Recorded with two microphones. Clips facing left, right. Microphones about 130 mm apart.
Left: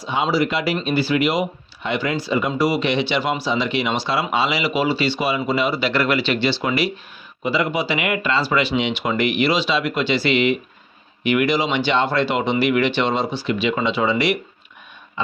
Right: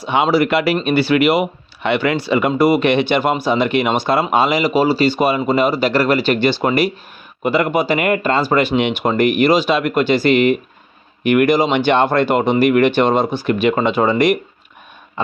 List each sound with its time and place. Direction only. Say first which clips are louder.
0.0 s speech: right 5 dB; 65° right (ahead or behind)